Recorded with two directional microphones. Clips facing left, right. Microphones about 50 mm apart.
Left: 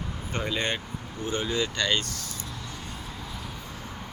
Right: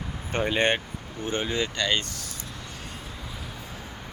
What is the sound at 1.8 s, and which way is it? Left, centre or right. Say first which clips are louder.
Speech: right 1 dB; centre.